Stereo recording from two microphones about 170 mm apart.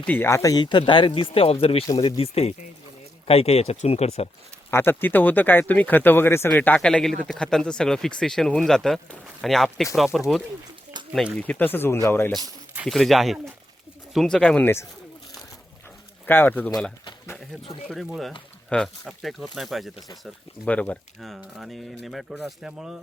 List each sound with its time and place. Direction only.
0.0 s speech: 10° left (ahead or behind); by 4.3 s 40° left (ahead or behind)
4.7 s speech: 15° left (ahead or behind)
12.7 s speech: 5° right (ahead or behind); by 14.8 s 15° left (ahead or behind)
16.2 s speech: 10° left (ahead or behind)
17.8 s speech: 5° right (ahead or behind)